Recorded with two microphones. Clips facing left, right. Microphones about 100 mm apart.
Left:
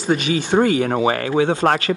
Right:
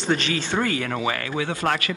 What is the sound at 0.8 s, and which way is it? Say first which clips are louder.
Speech: left 7 dB; 35° left (ahead or behind).